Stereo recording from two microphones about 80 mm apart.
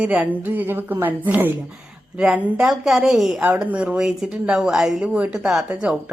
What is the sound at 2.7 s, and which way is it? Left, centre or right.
Speech, centre.